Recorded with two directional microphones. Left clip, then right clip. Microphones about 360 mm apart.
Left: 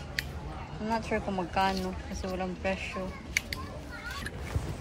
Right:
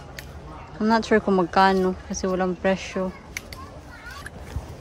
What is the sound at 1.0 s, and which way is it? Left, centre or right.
Speech, right.